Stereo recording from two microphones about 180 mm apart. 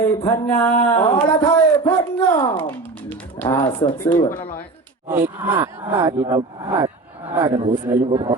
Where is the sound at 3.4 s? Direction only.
25° left (ahead or behind).